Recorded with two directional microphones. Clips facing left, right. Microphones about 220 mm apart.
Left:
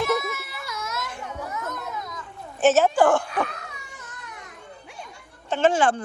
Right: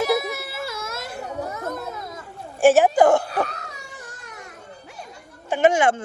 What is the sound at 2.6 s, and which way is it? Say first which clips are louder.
Speech: right 3 dB; 10° right (ahead or behind).